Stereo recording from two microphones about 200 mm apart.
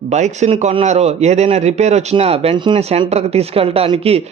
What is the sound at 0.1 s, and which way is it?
Speech, 35° right (ahead or behind).